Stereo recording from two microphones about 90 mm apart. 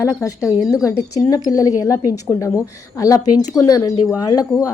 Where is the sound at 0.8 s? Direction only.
40° left (ahead or behind).